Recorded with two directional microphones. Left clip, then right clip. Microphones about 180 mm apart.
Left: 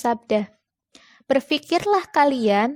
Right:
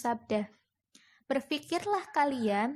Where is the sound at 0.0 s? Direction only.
45° left (ahead or behind).